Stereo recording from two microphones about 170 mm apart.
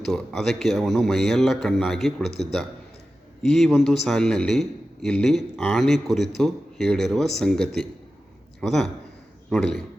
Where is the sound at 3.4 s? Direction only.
Centre (ahead or behind).